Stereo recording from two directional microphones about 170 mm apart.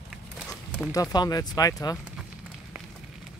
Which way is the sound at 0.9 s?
20° left (ahead or behind).